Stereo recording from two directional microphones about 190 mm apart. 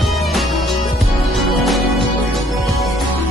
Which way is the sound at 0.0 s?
Centre (ahead or behind).